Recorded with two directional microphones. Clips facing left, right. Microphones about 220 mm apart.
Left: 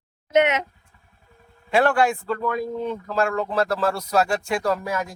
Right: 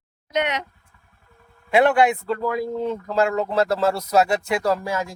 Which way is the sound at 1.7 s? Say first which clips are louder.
Right 2 dB; 20° right (ahead or behind).